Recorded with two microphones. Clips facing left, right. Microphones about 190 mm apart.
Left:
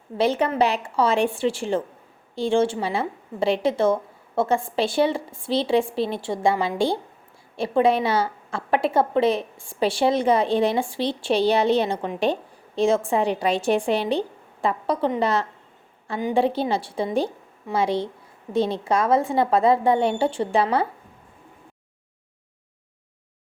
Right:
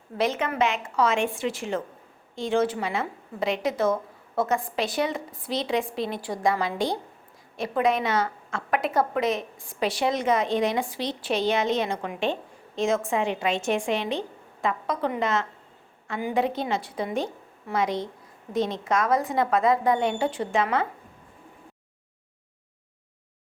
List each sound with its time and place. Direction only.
0.2 s a woman's voice: 35° left (ahead or behind)